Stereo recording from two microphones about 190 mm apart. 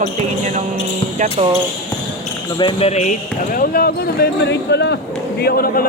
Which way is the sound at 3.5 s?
50° left (ahead or behind).